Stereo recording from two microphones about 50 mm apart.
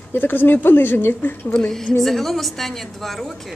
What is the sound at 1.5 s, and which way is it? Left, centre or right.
Speech, centre.